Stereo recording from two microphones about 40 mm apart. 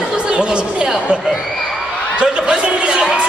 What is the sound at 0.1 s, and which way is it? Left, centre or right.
Chatter, right.